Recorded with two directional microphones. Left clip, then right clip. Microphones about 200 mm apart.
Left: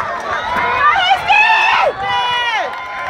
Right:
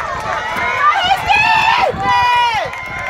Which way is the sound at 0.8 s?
55° right (ahead or behind).